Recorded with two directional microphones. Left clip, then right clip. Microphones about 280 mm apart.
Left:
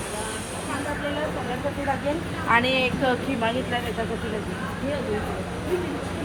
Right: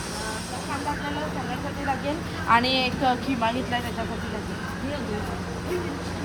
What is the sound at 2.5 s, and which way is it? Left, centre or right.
Speech, right.